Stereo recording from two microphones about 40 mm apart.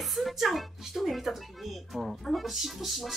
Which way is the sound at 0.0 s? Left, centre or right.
Centre.